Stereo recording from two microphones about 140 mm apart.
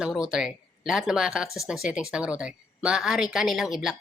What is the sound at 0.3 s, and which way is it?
A woman's voice, 5° right (ahead or behind).